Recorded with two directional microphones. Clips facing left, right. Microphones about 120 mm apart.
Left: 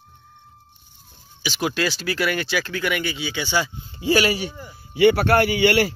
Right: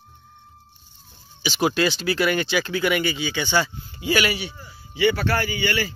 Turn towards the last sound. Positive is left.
turn(degrees=70)  # may be behind; listen again after turning